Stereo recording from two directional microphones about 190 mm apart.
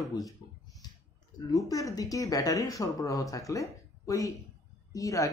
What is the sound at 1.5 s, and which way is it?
Speech, 15° left (ahead or behind).